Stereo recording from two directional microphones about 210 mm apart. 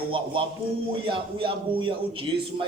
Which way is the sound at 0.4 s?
25° right (ahead or behind).